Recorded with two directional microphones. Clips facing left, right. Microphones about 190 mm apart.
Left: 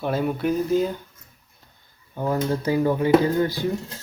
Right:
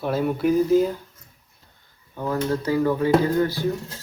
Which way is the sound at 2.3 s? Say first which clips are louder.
Even; 20° left (ahead or behind).